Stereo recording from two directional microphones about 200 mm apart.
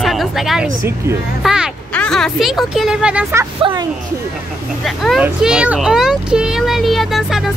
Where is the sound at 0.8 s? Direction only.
15° right (ahead or behind).